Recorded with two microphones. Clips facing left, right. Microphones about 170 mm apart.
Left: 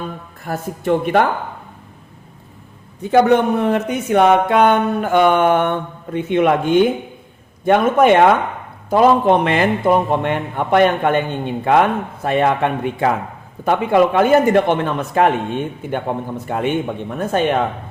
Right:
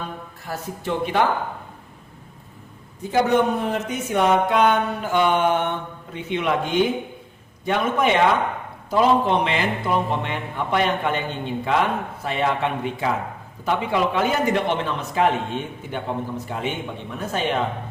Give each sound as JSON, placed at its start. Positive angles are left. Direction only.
{"t": 0.4, "sound": "a man's voice", "side_deg": 55}
{"t": 3.0, "sound": "a man's voice", "side_deg": 65}